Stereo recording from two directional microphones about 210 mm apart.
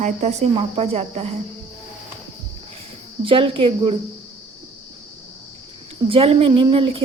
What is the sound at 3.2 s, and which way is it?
Speech, 25° right (ahead or behind).